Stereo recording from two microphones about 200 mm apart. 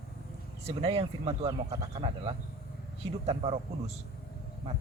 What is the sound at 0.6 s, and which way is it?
A man's voice, 30° right (ahead or behind).